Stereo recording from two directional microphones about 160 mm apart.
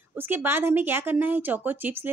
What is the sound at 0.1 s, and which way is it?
Speech, 10° right (ahead or behind).